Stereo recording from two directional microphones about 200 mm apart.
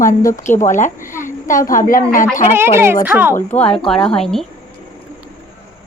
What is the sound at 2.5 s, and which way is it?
Speech, 10° right (ahead or behind).